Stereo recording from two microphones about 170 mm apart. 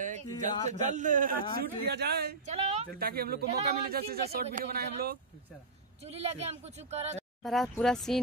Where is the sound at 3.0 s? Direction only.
65° right (ahead or behind).